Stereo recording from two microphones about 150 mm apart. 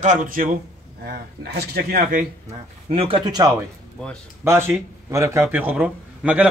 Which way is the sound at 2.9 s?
40° right (ahead or behind).